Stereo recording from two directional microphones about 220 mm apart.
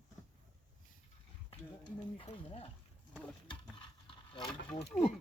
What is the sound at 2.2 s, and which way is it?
Speech, 25° left (ahead or behind).